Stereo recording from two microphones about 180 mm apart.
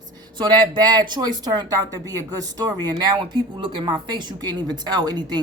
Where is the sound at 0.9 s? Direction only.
25° right (ahead or behind).